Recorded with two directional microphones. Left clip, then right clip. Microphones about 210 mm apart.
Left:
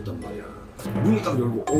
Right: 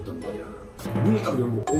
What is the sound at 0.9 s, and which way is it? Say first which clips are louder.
Speech: left 1 dB; centre (ahead or behind).